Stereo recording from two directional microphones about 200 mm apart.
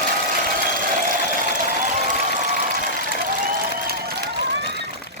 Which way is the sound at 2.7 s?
45° right (ahead or behind).